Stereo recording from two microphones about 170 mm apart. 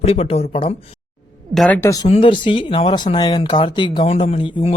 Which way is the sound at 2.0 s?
35° left (ahead or behind).